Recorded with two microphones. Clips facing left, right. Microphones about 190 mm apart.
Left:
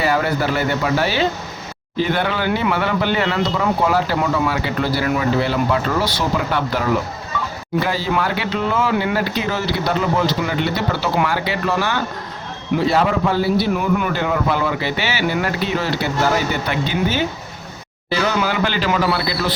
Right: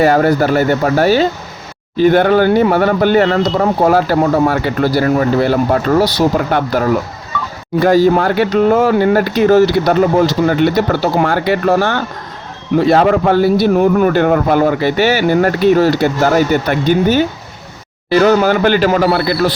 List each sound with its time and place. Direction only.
0.0 s speech: 45° right (ahead or behind)
7.9 s speech: 45° right (ahead or behind)